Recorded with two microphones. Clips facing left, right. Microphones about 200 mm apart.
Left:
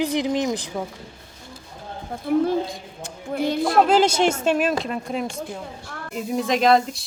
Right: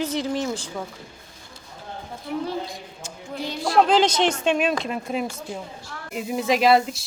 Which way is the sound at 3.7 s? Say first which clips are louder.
Even; 10° left (ahead or behind).